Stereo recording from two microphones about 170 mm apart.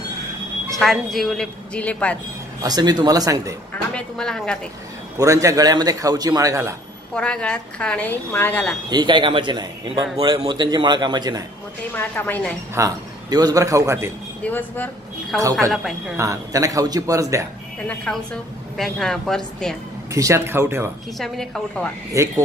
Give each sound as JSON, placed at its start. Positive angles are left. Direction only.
{"t": 0.7, "sound": "a woman's voice", "side_deg": 0}
{"t": 2.6, "sound": "a man's voice", "side_deg": -25}
{"t": 3.9, "sound": "a woman's voice", "side_deg": 5}
{"t": 5.2, "sound": "a man's voice", "side_deg": -20}
{"t": 7.2, "sound": "a woman's voice", "side_deg": 5}
{"t": 8.9, "sound": "a man's voice", "side_deg": -30}
{"t": 11.9, "sound": "a woman's voice", "side_deg": 10}
{"t": 12.7, "sound": "a man's voice", "side_deg": -20}
{"t": 14.4, "sound": "a woman's voice", "side_deg": 10}
{"t": 16.2, "sound": "a man's voice", "side_deg": -20}
{"t": 17.8, "sound": "a woman's voice", "side_deg": 5}
{"t": 20.1, "sound": "speech", "side_deg": -20}
{"t": 21.2, "sound": "a woman's voice", "side_deg": 5}
{"t": 22.2, "sound": "a man's voice", "side_deg": -20}